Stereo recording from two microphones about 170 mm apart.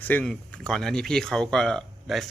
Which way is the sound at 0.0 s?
10° left (ahead or behind).